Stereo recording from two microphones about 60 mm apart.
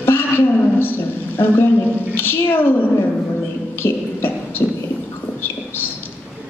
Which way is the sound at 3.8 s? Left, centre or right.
Left.